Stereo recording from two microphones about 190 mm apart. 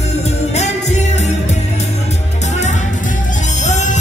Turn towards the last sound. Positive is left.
turn(degrees=40)  # may be behind; listen again after turning